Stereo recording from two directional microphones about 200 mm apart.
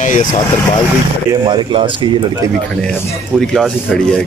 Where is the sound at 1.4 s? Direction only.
25° right (ahead or behind).